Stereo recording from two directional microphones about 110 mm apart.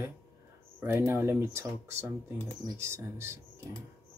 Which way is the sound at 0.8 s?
25° right (ahead or behind).